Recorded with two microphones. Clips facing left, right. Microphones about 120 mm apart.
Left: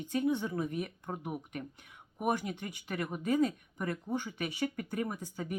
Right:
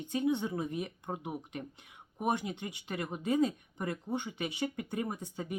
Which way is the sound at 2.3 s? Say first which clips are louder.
Even; 25° right (ahead or behind).